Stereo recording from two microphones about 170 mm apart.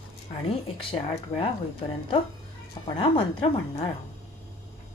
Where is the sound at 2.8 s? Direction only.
25° left (ahead or behind).